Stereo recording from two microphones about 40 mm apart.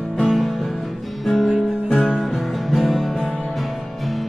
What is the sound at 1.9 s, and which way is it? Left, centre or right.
Music, centre.